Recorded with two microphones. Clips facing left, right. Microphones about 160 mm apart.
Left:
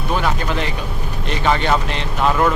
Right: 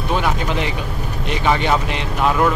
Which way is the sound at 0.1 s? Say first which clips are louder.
Even; 15° right (ahead or behind).